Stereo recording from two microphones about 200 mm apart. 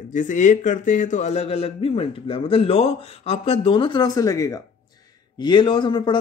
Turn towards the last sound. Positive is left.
turn(degrees=25)  # may be behind; listen again after turning